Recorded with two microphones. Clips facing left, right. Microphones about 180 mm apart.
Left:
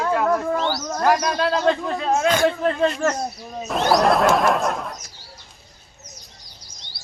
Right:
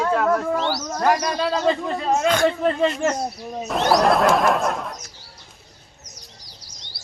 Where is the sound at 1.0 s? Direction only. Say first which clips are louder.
Left 1 dB; centre (ahead or behind).